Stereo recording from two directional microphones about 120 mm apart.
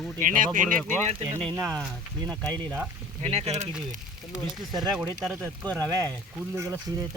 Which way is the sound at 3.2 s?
60° right (ahead or behind).